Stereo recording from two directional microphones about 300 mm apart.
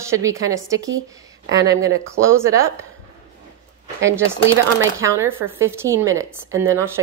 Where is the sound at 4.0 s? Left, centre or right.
Centre.